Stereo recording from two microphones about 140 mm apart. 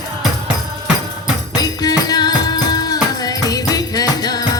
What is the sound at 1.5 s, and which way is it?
Music, 25° left (ahead or behind).